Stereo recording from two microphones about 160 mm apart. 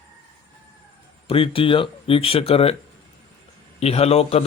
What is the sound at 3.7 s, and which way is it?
Speech, 40° left (ahead or behind).